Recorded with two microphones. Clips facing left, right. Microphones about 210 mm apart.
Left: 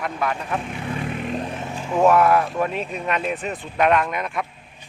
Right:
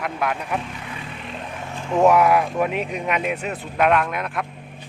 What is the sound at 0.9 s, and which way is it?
Vehicle, 50° left (ahead or behind).